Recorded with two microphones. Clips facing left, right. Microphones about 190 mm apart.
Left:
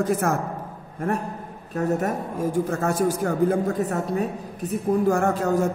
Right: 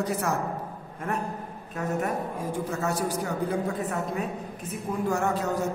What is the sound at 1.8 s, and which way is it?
A woman's voice, 40° left (ahead or behind).